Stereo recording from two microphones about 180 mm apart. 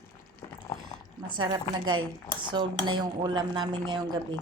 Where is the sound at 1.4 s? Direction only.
25° right (ahead or behind).